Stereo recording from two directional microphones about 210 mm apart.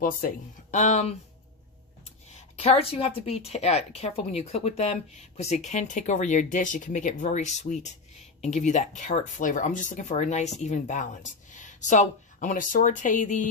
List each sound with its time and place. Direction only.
0.0 s speech: 40° left (ahead or behind)
2.6 s a woman's voice: 30° left (ahead or behind)